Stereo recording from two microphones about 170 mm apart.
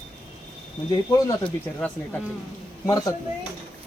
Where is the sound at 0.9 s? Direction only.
25° left (ahead or behind).